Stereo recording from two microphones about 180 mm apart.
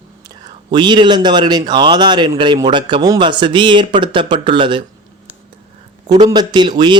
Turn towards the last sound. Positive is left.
turn(degrees=-25)  # may be behind; listen again after turning